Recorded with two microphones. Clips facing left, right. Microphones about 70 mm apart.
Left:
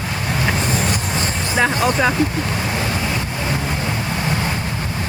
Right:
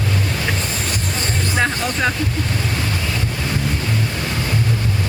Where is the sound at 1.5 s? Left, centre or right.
Centre.